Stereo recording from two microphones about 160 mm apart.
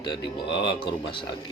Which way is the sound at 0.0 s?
30° left (ahead or behind).